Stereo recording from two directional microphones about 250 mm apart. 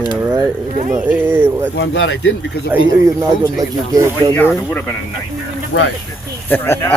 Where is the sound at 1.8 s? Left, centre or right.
Left.